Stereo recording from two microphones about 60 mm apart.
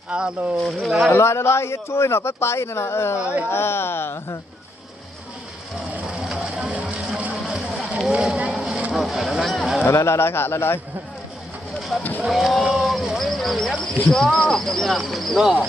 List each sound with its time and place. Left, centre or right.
0.1 s speech: centre
0.6 s speech: centre
1.1 s speech: left
6.1 s vehicle: centre
7.4 s a sound: centre
9.8 s speech: left
11.8 s a sound: centre
12.2 s speech: centre